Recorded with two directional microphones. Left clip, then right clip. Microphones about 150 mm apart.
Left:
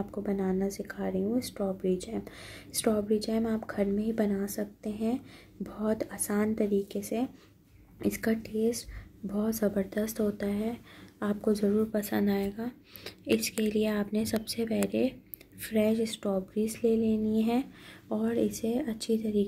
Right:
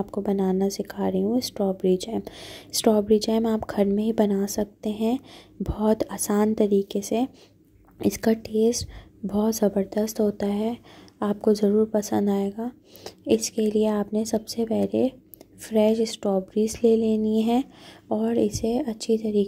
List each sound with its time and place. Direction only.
0.1 s speech: 40° right (ahead or behind)